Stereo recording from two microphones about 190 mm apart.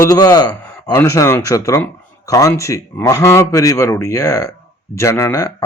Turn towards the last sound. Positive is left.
turn(degrees=15)  # may be behind; listen again after turning